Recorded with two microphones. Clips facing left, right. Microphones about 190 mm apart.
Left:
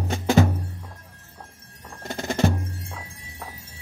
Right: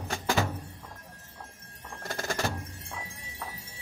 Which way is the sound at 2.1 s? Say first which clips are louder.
Left 8 dB; 20° left (ahead or behind).